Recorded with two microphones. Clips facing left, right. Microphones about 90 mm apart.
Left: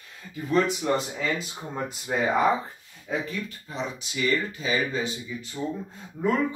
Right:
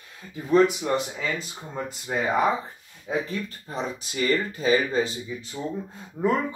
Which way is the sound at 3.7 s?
40° right (ahead or behind).